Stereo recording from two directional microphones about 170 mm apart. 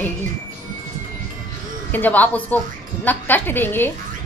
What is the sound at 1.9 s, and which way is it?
A woman's voice, 10° left (ahead or behind).